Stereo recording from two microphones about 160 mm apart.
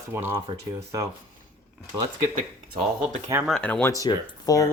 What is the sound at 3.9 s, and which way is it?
Speech, 20° left (ahead or behind).